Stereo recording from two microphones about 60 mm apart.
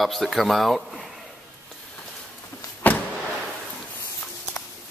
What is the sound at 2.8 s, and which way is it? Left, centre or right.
Power windows, left.